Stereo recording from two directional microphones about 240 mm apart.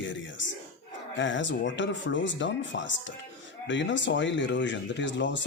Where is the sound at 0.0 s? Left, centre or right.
Left.